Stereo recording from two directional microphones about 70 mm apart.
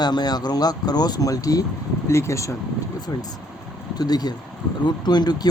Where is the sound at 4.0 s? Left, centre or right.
Left.